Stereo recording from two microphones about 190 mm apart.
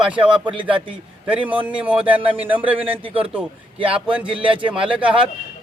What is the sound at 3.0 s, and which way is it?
Speech, 30° right (ahead or behind).